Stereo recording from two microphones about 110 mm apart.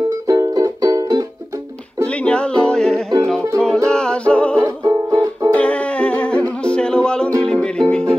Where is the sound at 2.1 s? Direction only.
10° left (ahead or behind).